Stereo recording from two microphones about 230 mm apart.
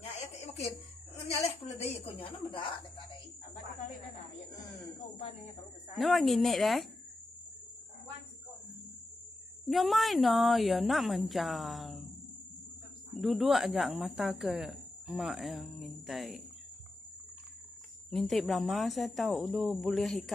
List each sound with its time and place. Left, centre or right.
0.1 s a sound: left
1.1 s a woman's voice: left
5.9 s a woman's voice: centre
9.7 s a woman's voice: centre
13.2 s a woman's voice: centre
18.1 s a woman's voice: centre